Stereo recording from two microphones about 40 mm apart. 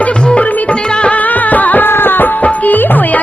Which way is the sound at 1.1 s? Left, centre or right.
Left.